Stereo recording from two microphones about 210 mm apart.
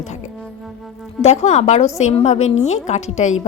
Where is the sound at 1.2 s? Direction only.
30° left (ahead or behind).